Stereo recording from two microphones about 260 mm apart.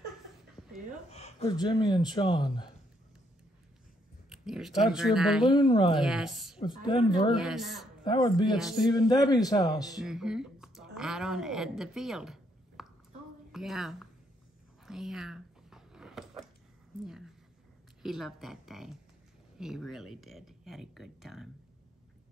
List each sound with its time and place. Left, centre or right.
0.6 s a sound: centre
1.1 s speech: left
4.3 s speech: centre
5.5 s speech: centre
5.9 s speech: centre
6.6 s speech: centre
7.3 s speech: centre
8.0 s speech: centre
10.0 s a woman's voice: centre
14.9 s a sound: centre
18.0 s speech: centre